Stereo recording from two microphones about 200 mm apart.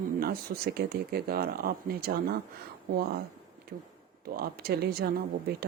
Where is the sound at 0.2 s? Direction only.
50° right (ahead or behind).